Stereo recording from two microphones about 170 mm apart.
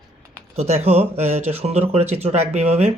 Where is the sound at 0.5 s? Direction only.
40° right (ahead or behind).